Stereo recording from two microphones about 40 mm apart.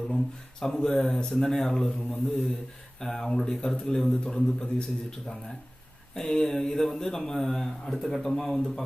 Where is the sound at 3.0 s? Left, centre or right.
Centre.